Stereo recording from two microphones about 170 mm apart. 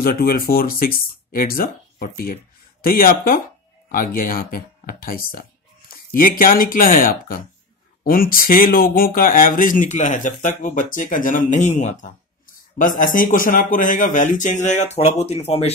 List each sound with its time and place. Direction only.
0.0 s speech: 60° left (ahead or behind); by 15.7 s 40° left (ahead or behind)